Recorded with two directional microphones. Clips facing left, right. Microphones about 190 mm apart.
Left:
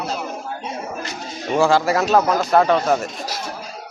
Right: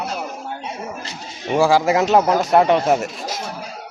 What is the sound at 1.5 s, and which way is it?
Speech, 15° right (ahead or behind).